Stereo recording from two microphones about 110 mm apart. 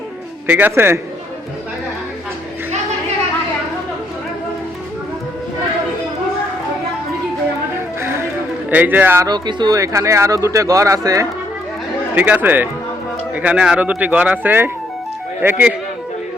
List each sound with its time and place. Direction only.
0.4 s speech: 15° right (ahead or behind)
8.0 s music: 20° right (ahead or behind)
8.7 s speech: 15° right (ahead or behind)
9.2 s speech: 40° right (ahead or behind)
9.7 s speech: 30° right (ahead or behind)
12.1 s speech: 15° right (ahead or behind)